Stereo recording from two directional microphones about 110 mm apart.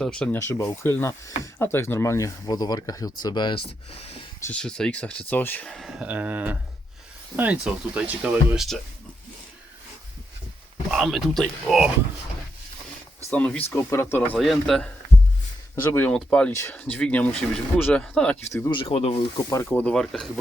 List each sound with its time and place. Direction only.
0.0 s speech: 5° left (ahead or behind)
0.3 s speech: 25° left (ahead or behind); by 3.6 s 40° left (ahead or behind)
4.5 s speech: 10° left (ahead or behind)
5.6 s speech: centre (ahead or behind)
6.1 s speech: 15° right (ahead or behind)
10.9 s speech: centre (ahead or behind)
13.3 s speech: 15° left (ahead or behind)
14.3 s speech: centre (ahead or behind)
15.7 s speech: 20° left (ahead or behind)
16.1 s speech: 5° left (ahead or behind)
18.3 s speech: 25° left (ahead or behind)
18.7 s speech: 55° left (ahead or behind)
19.6 s speech: 10° left (ahead or behind)